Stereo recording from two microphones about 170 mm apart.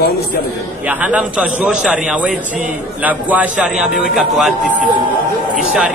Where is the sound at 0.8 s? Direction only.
10° right (ahead or behind).